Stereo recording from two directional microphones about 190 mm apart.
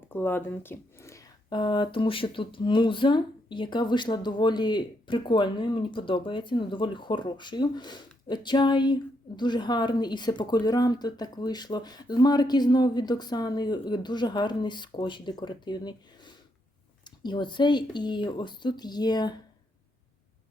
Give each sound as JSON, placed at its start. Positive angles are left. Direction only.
{"t": 0.1, "sound": "speech", "side_deg": 10}